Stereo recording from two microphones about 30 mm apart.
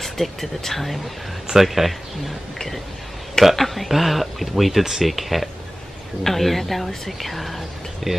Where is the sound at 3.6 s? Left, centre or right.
Centre.